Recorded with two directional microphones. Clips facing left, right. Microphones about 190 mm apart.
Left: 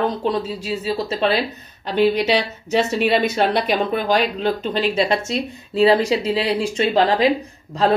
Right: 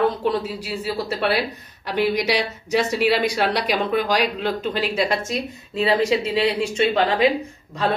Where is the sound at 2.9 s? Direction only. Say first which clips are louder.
Left 1 dB; 25° left (ahead or behind).